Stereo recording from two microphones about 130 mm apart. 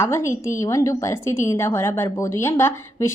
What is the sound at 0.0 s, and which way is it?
A woman's voice, 20° left (ahead or behind).